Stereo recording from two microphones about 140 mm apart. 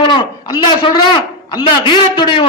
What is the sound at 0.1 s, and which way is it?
A man's voice, 30° left (ahead or behind).